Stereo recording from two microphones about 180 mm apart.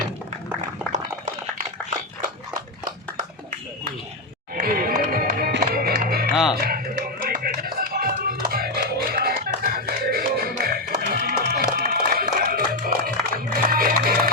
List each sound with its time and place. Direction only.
4.5 s music: 55° right (ahead or behind)
6.3 s music: centre (ahead or behind)
6.6 s music: 55° right (ahead or behind)